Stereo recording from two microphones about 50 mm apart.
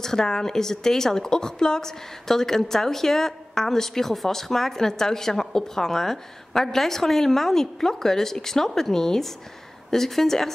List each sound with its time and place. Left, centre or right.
0.0 s a woman's voice: centre